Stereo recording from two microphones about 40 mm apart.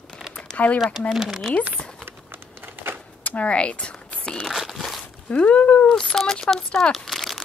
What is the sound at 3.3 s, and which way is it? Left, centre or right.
Speech, left.